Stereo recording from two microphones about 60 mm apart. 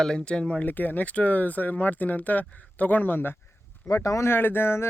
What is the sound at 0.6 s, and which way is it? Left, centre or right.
Speech, left.